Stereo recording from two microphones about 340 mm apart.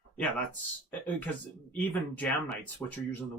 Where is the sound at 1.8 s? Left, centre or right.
Centre.